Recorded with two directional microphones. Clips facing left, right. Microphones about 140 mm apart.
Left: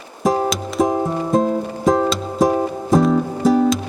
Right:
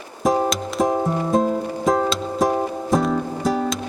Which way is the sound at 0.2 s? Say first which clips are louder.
Left 1 dB; centre (ahead or behind).